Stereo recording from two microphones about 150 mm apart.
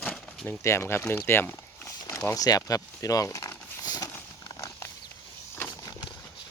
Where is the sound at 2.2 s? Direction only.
20° left (ahead or behind).